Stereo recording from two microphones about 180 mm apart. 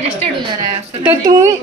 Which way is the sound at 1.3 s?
20° right (ahead or behind).